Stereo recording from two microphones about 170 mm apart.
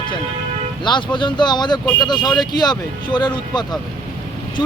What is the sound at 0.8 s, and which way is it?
Speech, 25° left (ahead or behind).